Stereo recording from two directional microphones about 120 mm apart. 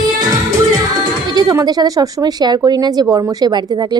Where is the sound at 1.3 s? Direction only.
30° right (ahead or behind).